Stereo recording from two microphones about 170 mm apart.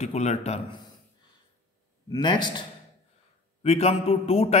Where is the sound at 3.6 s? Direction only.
35° left (ahead or behind).